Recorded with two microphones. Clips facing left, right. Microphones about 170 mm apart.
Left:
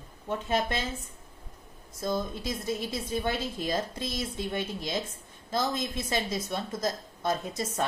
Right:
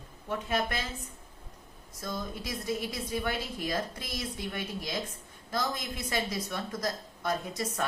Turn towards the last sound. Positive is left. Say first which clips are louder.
# left 2 dB
turn(degrees=25)  # may be behind; listen again after turning